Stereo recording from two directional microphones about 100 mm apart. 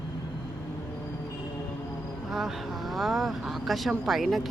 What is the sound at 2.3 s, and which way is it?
Speech, 5° right (ahead or behind).